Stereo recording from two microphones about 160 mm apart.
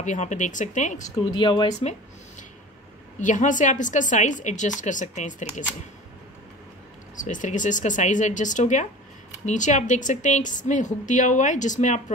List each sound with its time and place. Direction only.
0.0 s a woman's voice: 50° left (ahead or behind)
1.3 s speech: 30° left (ahead or behind)
1.7 s a woman's voice: 45° left (ahead or behind)
3.2 s a woman's voice: 50° left (ahead or behind)
7.2 s a woman's voice: 50° left (ahead or behind)